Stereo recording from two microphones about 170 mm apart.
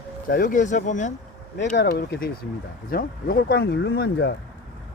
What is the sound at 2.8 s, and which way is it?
Speech, 60° left (ahead or behind).